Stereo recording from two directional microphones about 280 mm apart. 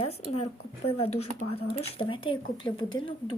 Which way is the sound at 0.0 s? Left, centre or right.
Left.